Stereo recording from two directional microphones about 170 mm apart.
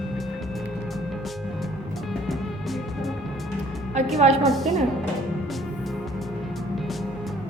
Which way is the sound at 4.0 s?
40° right (ahead or behind).